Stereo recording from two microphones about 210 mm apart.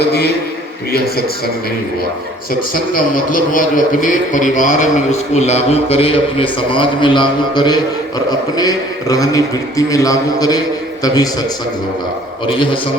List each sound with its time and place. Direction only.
0.0 s a man's voice: 50° left (ahead or behind)
2.5 s a man's voice: 40° left (ahead or behind); by 11.3 s 15° left (ahead or behind)